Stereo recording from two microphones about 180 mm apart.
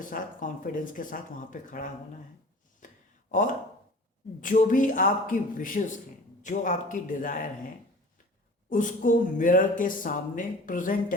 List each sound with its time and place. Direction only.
0.0 s speech: 50° left (ahead or behind)
2.8 s a sound: 45° left (ahead or behind)
4.4 s speech: 45° left (ahead or behind)
8.7 s speech: 45° left (ahead or behind)